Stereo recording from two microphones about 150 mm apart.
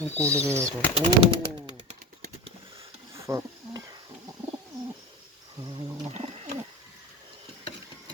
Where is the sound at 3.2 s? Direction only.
20° right (ahead or behind).